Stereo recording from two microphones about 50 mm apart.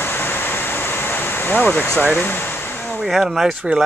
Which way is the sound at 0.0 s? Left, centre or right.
Left.